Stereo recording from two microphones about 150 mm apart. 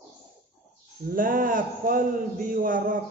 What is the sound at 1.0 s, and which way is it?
A man's voice, 70° right (ahead or behind).